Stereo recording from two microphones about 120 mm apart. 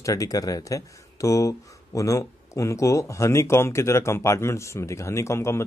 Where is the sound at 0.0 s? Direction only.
30° left (ahead or behind).